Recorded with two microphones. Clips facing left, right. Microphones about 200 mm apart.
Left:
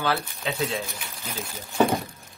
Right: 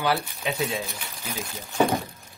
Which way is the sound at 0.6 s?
Centre (ahead or behind).